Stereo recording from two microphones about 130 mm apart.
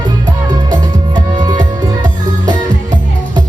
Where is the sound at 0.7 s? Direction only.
35° right (ahead or behind).